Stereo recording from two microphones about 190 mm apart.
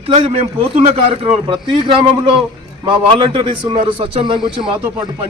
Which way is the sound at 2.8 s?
25° right (ahead or behind).